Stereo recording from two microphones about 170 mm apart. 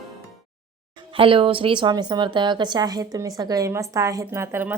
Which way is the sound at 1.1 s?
30° right (ahead or behind).